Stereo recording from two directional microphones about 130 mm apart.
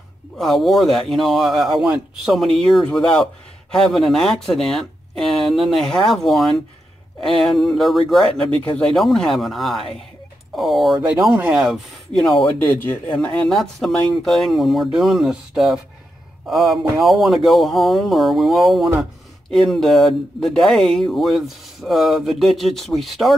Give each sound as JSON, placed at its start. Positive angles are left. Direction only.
{"t": 0.4, "sound": "speech", "side_deg": 0}
{"t": 12.5, "sound": "speech", "side_deg": 15}
{"t": 13.1, "sound": "speech", "side_deg": 0}